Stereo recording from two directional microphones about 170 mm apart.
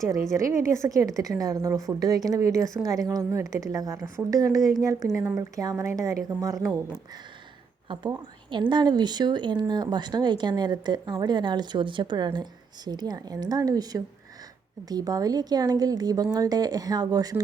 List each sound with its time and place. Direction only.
0.1 s speech: 20° right (ahead or behind)
7.9 s a woman's voice: 25° right (ahead or behind)